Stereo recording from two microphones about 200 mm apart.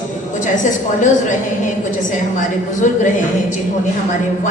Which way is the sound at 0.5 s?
40° left (ahead or behind).